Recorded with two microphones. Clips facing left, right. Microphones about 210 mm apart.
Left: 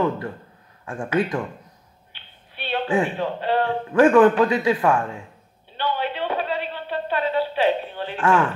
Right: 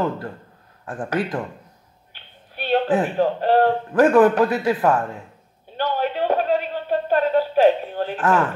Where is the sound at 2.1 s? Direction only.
45° right (ahead or behind).